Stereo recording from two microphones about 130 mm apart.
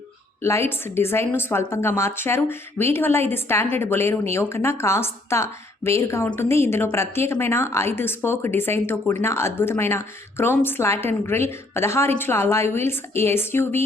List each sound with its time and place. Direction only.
0.4 s a woman's voice: 20° left (ahead or behind)